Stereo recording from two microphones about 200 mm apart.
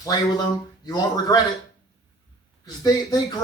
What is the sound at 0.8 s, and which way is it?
Speech, 20° left (ahead or behind).